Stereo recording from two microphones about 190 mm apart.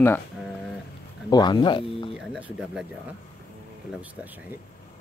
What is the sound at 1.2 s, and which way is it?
Speech, 20° left (ahead or behind).